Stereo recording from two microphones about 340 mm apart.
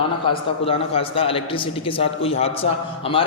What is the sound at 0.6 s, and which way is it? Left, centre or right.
A man's voice, centre.